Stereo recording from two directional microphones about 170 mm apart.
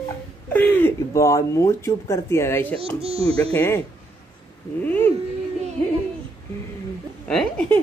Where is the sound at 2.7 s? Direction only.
35° right (ahead or behind).